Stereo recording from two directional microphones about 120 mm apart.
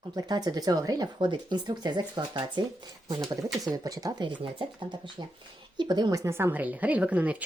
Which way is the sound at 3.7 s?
30° right (ahead or behind).